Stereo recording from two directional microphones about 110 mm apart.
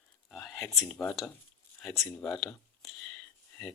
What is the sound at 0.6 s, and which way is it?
Speech, 25° left (ahead or behind).